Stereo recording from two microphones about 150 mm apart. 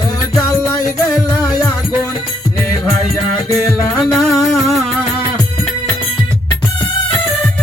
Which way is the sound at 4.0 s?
Centre (ahead or behind).